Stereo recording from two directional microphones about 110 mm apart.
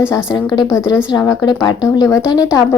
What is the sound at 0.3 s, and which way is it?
Speech, 40° left (ahead or behind).